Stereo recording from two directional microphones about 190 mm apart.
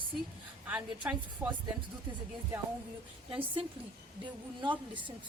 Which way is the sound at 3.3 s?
30° right (ahead or behind).